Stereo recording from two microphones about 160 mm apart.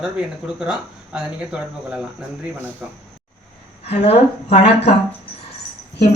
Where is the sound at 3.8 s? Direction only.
40° left (ahead or behind).